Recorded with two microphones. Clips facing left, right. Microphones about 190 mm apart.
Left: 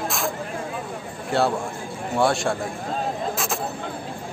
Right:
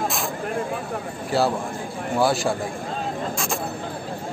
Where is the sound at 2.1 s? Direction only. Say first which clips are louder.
Even; centre (ahead or behind).